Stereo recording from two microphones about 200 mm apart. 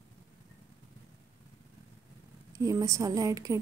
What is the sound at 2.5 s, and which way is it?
A woman's voice, 15° right (ahead or behind).